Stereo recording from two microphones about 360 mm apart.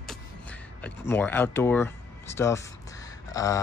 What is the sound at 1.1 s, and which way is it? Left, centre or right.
Speech, centre.